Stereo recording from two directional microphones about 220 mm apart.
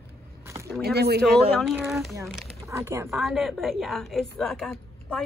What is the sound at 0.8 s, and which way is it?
Speech, 45° right (ahead or behind).